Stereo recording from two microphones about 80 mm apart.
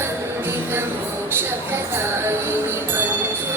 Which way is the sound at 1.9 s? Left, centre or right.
Right.